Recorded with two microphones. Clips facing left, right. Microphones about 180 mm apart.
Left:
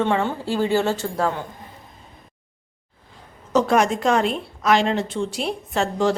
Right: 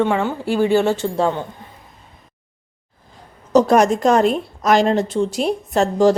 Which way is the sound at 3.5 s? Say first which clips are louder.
Right 5 dB; 40° right (ahead or behind).